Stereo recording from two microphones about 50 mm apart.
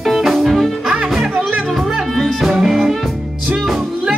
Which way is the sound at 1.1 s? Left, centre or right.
Centre.